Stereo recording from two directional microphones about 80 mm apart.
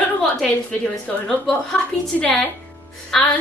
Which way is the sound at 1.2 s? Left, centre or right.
Centre.